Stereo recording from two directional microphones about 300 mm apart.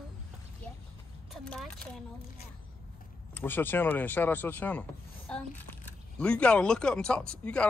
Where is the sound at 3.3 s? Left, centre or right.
Centre.